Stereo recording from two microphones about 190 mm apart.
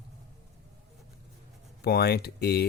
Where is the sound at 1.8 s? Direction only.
60° left (ahead or behind).